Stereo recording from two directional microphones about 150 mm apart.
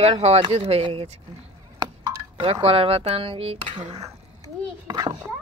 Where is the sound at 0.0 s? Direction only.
45° right (ahead or behind).